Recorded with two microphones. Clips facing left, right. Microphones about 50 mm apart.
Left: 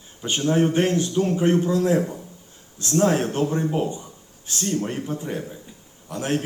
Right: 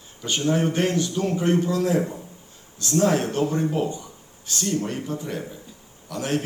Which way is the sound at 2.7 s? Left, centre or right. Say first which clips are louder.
Left 1 dB; left.